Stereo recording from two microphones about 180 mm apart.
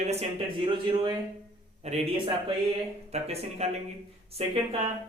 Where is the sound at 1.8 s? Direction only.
35° right (ahead or behind).